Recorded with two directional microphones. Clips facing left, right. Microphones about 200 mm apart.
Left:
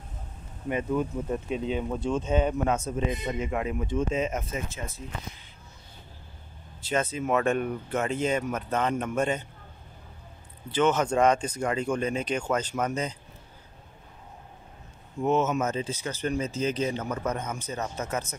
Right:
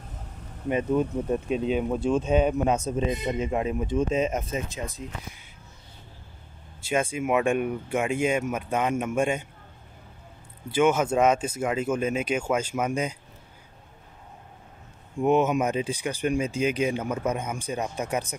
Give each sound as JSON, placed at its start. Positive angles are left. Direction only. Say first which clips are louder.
{"t": 0.7, "sound": "speech", "louder": "right 3 dB", "side_deg": -20}
{"t": 6.8, "sound": "speech", "louder": "right 2 dB", "side_deg": -10}
{"t": 10.7, "sound": "speech", "louder": "right 2 dB", "side_deg": -10}
{"t": 15.1, "sound": "speech", "louder": "right 3 dB", "side_deg": -15}